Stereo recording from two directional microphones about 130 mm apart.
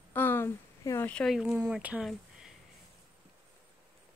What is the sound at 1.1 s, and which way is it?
Speech, 5° left (ahead or behind).